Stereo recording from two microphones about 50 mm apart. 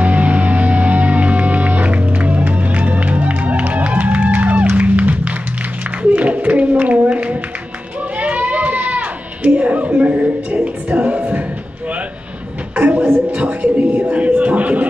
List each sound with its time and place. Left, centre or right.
0.0 s music: right
8.2 s sheep: right
12.7 s a sound: right
14.1 s music: right